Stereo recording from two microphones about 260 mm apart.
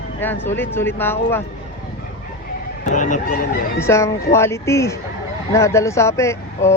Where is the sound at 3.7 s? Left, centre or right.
Centre.